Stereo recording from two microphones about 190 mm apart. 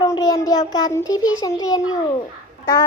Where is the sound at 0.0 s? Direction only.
20° left (ahead or behind).